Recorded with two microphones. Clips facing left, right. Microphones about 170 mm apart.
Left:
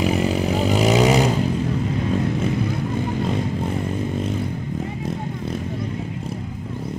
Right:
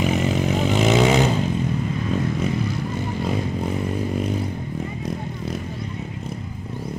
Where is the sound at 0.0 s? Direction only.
10° left (ahead or behind).